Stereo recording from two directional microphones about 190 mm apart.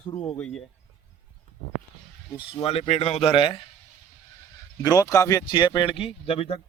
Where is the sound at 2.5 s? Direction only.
30° left (ahead or behind).